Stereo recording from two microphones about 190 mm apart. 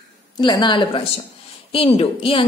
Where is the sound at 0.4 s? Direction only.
25° left (ahead or behind).